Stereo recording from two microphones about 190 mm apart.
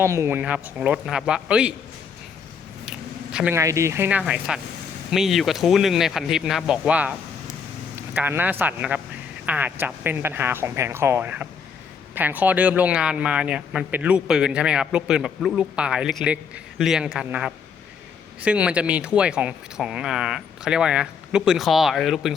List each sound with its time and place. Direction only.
0.0 s speech: 15° right (ahead or behind)
3.3 s speech: 10° right (ahead or behind)
8.1 s speech: 10° right (ahead or behind)